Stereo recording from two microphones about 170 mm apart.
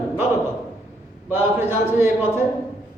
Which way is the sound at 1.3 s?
10° right (ahead or behind).